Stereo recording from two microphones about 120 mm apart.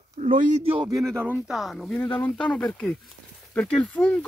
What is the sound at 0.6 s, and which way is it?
Speech, 50° right (ahead or behind).